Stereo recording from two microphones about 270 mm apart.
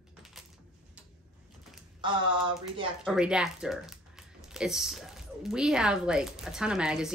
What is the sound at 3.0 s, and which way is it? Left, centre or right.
Speech, centre.